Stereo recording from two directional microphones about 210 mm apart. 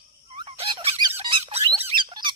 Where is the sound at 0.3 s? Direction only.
25° right (ahead or behind).